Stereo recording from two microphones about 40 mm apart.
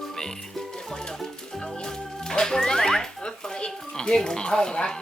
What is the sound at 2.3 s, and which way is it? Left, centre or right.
A child's voice, centre.